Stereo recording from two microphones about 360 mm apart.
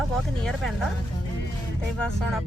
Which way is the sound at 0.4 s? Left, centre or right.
Centre.